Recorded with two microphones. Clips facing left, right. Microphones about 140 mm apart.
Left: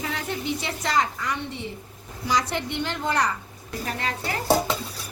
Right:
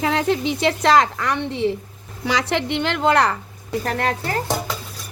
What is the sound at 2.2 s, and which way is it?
A woman's voice, 75° right (ahead or behind).